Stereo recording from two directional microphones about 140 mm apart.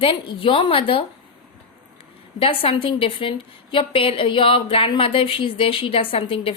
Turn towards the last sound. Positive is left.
turn(degrees=40)  # may be behind; listen again after turning